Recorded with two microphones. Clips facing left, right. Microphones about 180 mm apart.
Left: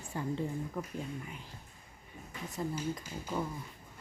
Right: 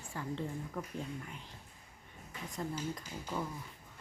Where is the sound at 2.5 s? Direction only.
5° left (ahead or behind).